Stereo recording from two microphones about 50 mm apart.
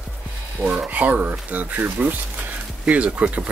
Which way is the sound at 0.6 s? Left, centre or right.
Right.